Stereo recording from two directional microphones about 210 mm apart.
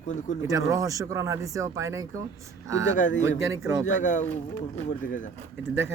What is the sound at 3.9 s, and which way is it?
Speech, 35° left (ahead or behind).